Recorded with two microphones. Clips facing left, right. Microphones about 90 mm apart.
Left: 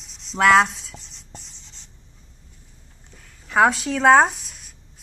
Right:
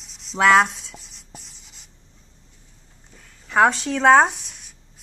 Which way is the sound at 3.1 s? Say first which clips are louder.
Even; centre (ahead or behind).